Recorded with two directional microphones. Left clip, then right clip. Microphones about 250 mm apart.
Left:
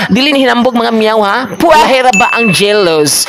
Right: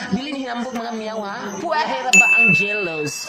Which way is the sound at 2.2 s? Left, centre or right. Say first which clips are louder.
Left 4 dB; left.